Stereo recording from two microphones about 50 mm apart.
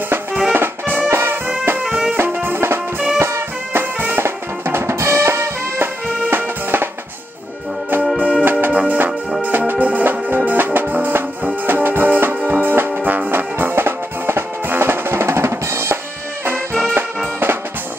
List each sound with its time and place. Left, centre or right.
0.5 s music: right
1.9 s music: right
2.1 s music: right
5.8 s music: right
8.2 s music: centre
8.5 s music: right
12.9 s music: right
16.8 s music: right